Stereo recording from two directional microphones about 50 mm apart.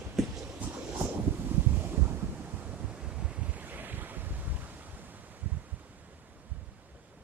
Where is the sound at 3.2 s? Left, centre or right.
Right.